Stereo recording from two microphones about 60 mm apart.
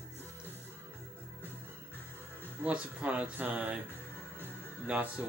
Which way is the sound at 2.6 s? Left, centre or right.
Right.